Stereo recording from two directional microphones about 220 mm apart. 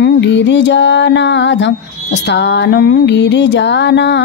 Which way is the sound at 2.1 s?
50° left (ahead or behind).